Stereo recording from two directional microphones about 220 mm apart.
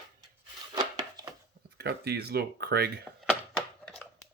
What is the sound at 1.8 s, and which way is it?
Speech, 45° right (ahead or behind).